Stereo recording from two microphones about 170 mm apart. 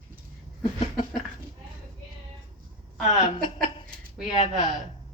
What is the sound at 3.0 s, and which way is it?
Speech, 40° left (ahead or behind).